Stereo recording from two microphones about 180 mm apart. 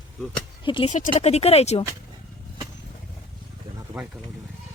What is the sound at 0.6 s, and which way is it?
Speech, 30° left (ahead or behind).